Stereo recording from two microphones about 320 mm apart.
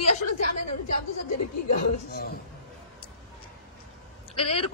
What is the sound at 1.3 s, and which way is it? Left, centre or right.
Speech, left.